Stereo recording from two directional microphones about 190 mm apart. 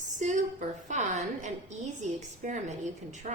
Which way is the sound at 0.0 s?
40° right (ahead or behind).